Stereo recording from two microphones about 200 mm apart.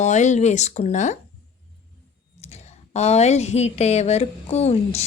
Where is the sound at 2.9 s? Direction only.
30° left (ahead or behind).